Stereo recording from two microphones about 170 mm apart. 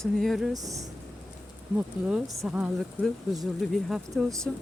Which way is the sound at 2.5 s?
5° right (ahead or behind).